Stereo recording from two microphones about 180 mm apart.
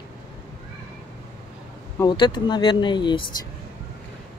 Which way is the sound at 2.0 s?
25° left (ahead or behind).